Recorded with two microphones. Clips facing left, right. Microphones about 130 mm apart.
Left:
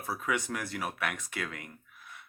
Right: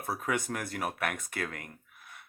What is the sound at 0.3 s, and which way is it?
Speech, 45° right (ahead or behind).